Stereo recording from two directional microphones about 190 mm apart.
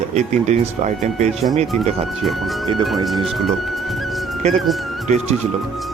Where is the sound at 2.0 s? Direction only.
Centre (ahead or behind).